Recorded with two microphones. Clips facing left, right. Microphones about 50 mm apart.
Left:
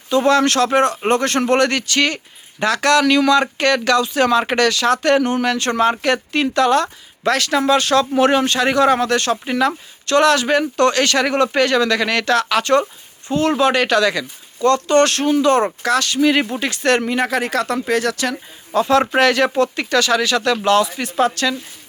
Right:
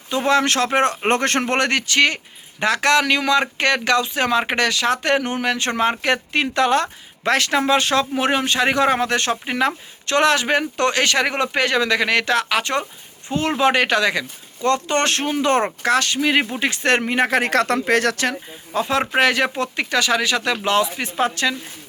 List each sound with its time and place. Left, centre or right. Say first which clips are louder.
0.1 s speech: left 3 dB; centre
8.1 s speech: left 5 dB; centre; by 18.2 s right
18.7 s speech: left 5 dB; centre